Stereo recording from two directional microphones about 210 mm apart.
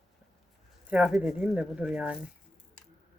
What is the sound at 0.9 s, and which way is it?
Speech, 5° right (ahead or behind).